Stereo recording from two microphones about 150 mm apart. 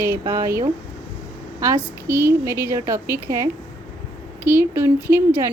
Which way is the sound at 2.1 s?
15° right (ahead or behind).